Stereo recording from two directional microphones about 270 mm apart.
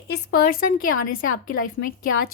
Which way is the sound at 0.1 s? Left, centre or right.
Left.